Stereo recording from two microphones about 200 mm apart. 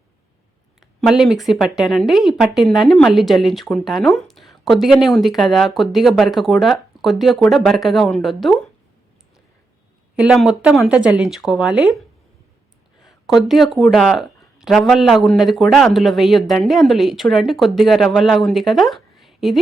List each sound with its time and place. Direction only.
1.0 s speech: centre (ahead or behind)
10.2 s speech: 5° right (ahead or behind)
13.0 s speech: centre (ahead or behind)